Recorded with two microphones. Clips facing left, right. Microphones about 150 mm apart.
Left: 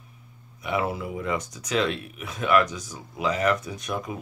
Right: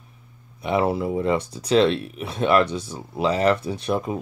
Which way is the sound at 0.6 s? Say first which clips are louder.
Right 6 dB; 30° right (ahead or behind).